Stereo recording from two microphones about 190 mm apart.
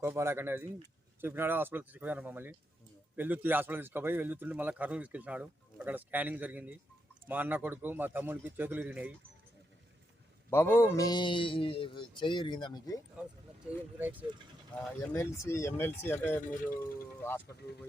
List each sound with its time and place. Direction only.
0.0 s a man's voice: 15° right (ahead or behind)
10.5 s a man's voice: 10° left (ahead or behind)
13.7 s a man's voice: 10° right (ahead or behind)
15.0 s speech: 15° left (ahead or behind)
16.4 s speech: 45° left (ahead or behind)
16.6 s speech: 10° left (ahead or behind)